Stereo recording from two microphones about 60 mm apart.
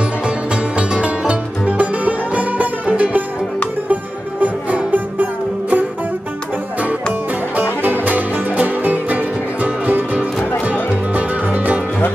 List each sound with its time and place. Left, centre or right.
0.7 s music: centre
7.8 s music: right